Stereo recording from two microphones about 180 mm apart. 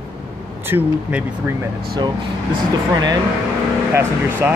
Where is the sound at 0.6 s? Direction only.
10° right (ahead or behind).